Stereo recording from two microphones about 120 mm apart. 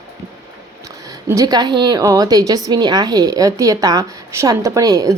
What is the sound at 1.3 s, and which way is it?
A woman's voice, 30° right (ahead or behind).